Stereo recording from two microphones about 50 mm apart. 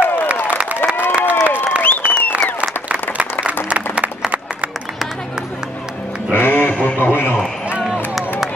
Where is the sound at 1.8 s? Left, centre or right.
Left.